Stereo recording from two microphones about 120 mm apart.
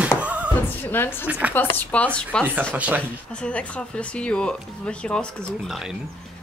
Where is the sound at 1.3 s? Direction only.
10° right (ahead or behind).